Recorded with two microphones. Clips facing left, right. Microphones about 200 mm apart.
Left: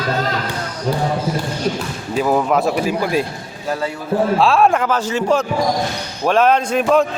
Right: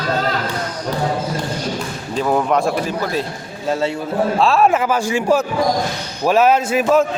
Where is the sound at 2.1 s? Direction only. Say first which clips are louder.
Left 1 dB; 5° left (ahead or behind).